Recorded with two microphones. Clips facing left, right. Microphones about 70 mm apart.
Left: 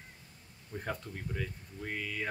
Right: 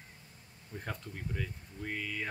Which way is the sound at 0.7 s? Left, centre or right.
Centre.